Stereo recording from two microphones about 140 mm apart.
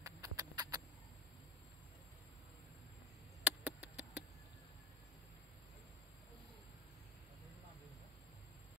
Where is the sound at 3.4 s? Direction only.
10° right (ahead or behind).